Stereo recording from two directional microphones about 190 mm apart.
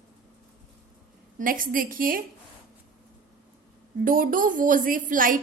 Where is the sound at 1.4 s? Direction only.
45° right (ahead or behind).